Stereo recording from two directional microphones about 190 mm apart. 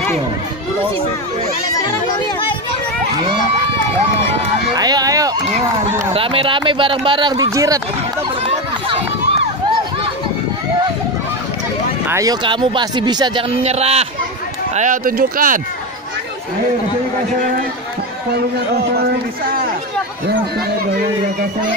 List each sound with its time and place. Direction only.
4.7 s speech: 20° right (ahead or behind)
6.1 s a man's voice: 30° right (ahead or behind)
12.1 s a man's voice: 20° right (ahead or behind); by 14.0 s 35° right (ahead or behind)
14.8 s speech: 45° right (ahead or behind)